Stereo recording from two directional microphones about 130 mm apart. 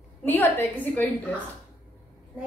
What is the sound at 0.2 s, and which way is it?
Speech, 15° left (ahead or behind).